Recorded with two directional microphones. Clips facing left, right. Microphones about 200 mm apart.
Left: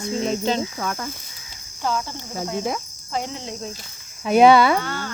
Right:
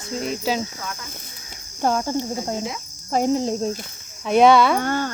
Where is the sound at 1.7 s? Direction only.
45° right (ahead or behind).